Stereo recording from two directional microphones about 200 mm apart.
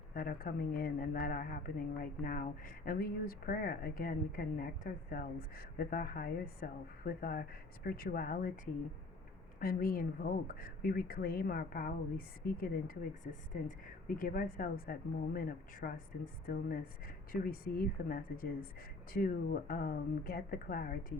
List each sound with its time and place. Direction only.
0.1 s speech: 45° left (ahead or behind)
9.6 s speech: 45° left (ahead or behind)